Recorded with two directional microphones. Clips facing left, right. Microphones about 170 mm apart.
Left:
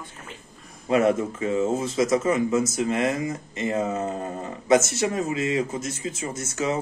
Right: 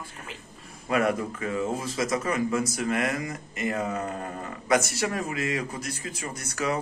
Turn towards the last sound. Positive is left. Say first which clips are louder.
# left 3 dB
turn(degrees=25)  # may be behind; listen again after turning